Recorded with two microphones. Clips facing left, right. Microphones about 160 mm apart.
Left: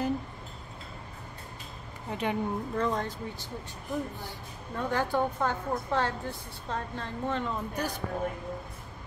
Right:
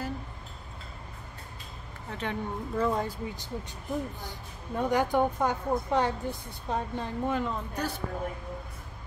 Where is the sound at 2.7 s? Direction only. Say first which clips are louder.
Right 5 dB; 5° right (ahead or behind).